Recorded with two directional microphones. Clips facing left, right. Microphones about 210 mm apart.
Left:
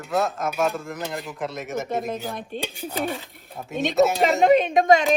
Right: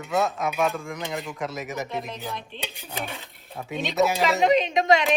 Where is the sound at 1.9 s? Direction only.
45° left (ahead or behind).